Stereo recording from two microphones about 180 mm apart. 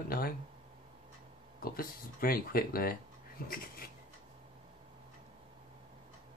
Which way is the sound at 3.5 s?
55° left (ahead or behind).